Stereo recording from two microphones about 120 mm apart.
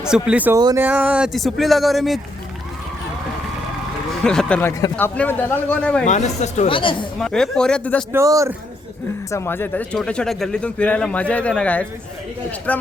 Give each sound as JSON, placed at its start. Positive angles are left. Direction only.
{"t": 0.0, "sound": "speech", "side_deg": -5}
{"t": 0.5, "sound": "speech", "side_deg": -30}
{"t": 0.8, "sound": "speech", "side_deg": -15}
{"t": 1.3, "sound": "speech", "side_deg": 0}
{"t": 4.2, "sound": "speech", "side_deg": 5}
{"t": 6.1, "sound": "speech", "side_deg": 75}
{"t": 6.7, "sound": "speech", "side_deg": 45}
{"t": 7.2, "sound": "speech", "side_deg": 5}
{"t": 8.1, "sound": "speech", "side_deg": -25}
{"t": 9.3, "sound": "speech", "side_deg": 20}